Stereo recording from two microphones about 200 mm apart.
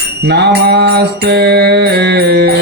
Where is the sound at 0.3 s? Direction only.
55° right (ahead or behind).